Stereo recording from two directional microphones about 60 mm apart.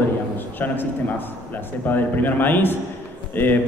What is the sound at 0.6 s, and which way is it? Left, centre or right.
A man's voice, left.